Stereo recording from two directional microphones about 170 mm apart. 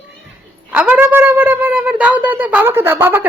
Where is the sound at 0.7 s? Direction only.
5° right (ahead or behind).